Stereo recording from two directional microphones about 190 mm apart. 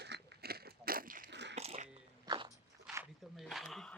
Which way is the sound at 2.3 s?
20° right (ahead or behind).